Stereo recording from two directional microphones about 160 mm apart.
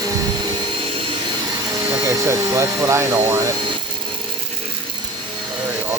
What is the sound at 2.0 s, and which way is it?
Speech, 20° right (ahead or behind).